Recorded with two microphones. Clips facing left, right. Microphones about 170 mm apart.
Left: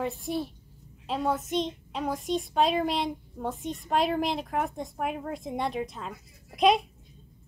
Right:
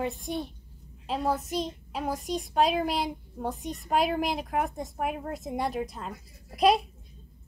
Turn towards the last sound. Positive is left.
turn(degrees=0)  # may be behind; listen again after turning